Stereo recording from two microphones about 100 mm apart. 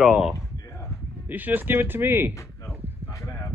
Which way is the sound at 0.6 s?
30° left (ahead or behind).